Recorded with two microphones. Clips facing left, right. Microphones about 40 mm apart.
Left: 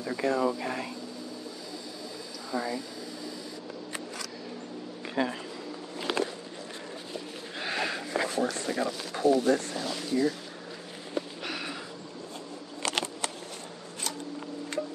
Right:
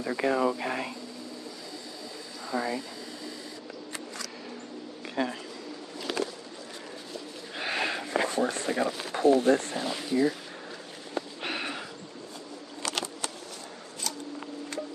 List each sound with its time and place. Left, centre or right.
0.0 s speech: right
2.5 s speech: centre
5.1 s speech: centre
6.0 s a sound: left
7.5 s a sound: centre
8.6 s speech: right
9.8 s speech: centre
11.4 s sniff: right
12.8 s a sound: left